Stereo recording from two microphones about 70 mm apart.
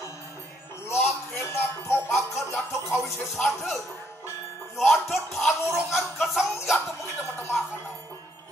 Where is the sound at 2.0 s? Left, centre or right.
Centre.